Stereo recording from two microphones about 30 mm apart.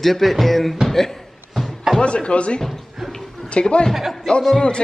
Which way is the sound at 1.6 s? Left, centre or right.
Left.